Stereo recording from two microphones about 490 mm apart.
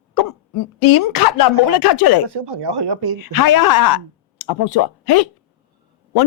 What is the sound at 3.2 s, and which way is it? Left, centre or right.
Speech, left.